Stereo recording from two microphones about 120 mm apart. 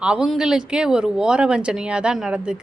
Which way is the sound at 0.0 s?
10° right (ahead or behind).